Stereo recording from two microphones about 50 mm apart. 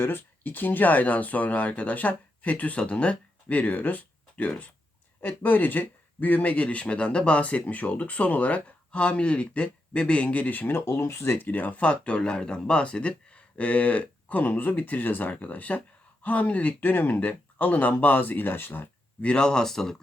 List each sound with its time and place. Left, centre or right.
0.0 s speech: left
11.3 s speech: left
19.2 s speech: centre